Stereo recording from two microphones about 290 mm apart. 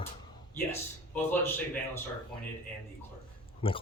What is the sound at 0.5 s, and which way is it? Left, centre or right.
Speech, centre.